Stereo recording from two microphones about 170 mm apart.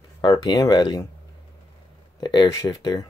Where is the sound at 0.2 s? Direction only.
25° left (ahead or behind).